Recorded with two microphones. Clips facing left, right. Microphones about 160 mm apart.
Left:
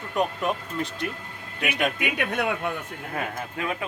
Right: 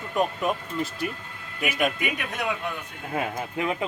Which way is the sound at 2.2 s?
60° left (ahead or behind).